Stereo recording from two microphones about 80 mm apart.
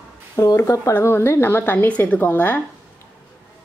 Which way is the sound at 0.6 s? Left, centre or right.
Left.